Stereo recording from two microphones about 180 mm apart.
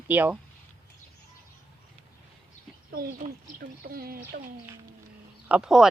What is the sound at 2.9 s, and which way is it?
Speech, 55° right (ahead or behind).